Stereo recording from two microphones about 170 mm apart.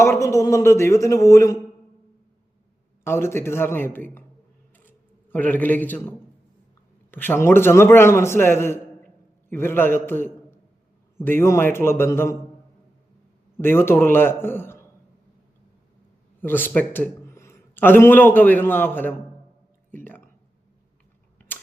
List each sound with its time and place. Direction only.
0.0 s a man's voice: 15° left (ahead or behind)
3.0 s a man's voice: 15° left (ahead or behind)
13.6 s a man's voice: 15° left (ahead or behind)
16.4 s a man's voice: 10° left (ahead or behind)
19.9 s a sound: 10° left (ahead or behind)
21.3 s typewriter: 10° left (ahead or behind)